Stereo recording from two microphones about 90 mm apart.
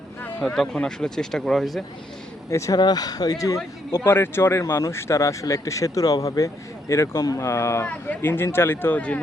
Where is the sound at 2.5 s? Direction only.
35° left (ahead or behind).